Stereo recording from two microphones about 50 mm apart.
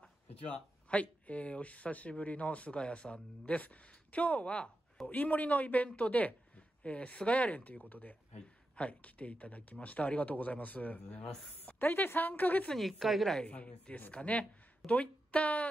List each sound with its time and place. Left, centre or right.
0.0 s a sound: left
1.2 s speech: left
11.8 s speech: left
12.7 s a woman's voice: centre
13.5 s speech: left